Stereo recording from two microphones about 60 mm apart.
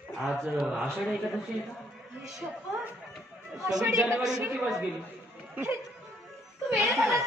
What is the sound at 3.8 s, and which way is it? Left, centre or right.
Speech, right.